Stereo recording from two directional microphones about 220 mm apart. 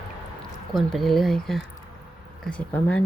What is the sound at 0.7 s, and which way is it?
Speech, centre (ahead or behind).